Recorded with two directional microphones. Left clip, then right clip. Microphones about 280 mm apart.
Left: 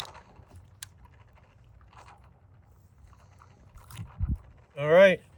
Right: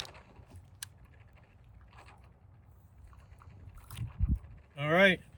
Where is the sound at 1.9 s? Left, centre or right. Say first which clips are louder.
Left 5 dB; left.